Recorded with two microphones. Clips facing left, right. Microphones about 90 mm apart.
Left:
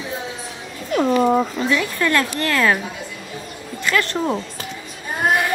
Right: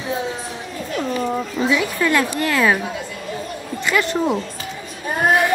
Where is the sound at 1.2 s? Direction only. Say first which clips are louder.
Left 6 dB; 30° left (ahead or behind).